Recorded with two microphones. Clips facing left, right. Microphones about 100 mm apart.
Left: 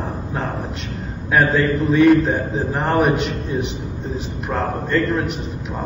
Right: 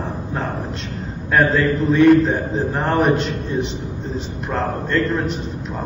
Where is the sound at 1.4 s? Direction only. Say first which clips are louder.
Even; centre (ahead or behind).